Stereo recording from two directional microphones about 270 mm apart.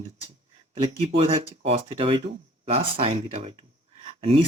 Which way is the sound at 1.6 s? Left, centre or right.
Right.